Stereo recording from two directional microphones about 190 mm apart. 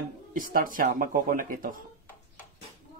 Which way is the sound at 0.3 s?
45° right (ahead or behind).